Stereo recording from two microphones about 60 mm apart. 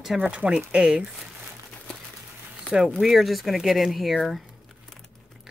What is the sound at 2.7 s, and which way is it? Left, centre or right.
Speech, centre.